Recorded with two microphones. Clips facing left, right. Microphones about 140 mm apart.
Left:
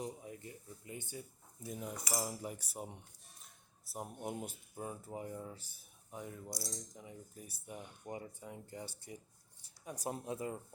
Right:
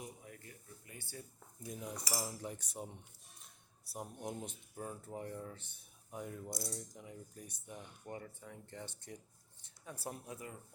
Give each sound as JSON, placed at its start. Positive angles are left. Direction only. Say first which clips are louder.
{"t": 0.0, "sound": "a sound", "louder": "left 6 dB", "side_deg": 20}
{"t": 1.6, "sound": "cutlery", "louder": "left 1 dB", "side_deg": 5}
{"t": 2.2, "sound": "speech", "louder": "left 2 dB", "side_deg": 5}
{"t": 4.0, "sound": "speech", "louder": "left 2 dB", "side_deg": 10}
{"t": 10.2, "sound": "speech", "louder": "left 8 dB", "side_deg": 25}